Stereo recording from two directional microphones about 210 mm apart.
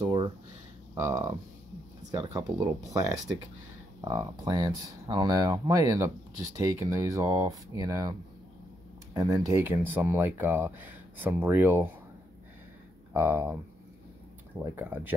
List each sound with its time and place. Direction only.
0.9 s speech: 15° right (ahead or behind)
2.3 s speech: 15° right (ahead or behind)
13.1 s speech: 10° right (ahead or behind)
14.6 s speech: 10° right (ahead or behind)